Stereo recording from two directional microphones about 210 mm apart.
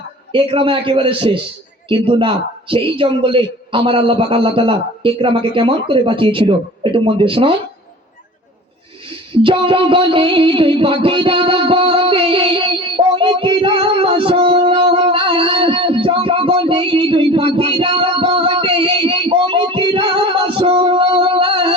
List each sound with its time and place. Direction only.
0.3 s a man's voice: 25° right (ahead or behind)
9.3 s a sound: 25° right (ahead or behind)
14.6 s music: 20° right (ahead or behind)